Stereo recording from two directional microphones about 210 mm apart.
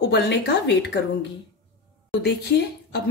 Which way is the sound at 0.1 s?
55° left (ahead or behind).